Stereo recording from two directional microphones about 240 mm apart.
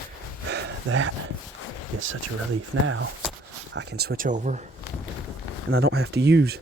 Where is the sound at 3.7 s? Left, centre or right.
Right.